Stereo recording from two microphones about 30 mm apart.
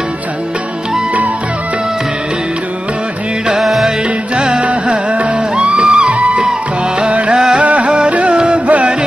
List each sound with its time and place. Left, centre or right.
4.4 s music: right
6.0 s music: right